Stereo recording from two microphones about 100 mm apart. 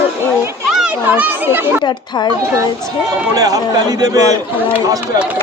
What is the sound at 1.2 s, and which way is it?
Speech, 20° right (ahead or behind).